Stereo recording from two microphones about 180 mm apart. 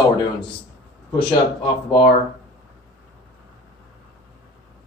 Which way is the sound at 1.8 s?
25° left (ahead or behind).